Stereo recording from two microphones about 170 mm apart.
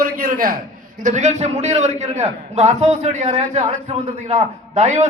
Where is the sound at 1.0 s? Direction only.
45° right (ahead or behind).